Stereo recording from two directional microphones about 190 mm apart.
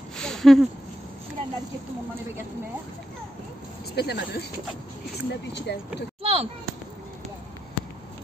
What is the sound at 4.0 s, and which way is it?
Speech, 60° left (ahead or behind).